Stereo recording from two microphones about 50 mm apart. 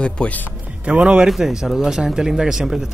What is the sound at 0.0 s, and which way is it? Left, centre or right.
Speech, left.